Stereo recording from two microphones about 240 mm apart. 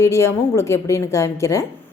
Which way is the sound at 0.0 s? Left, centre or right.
Centre.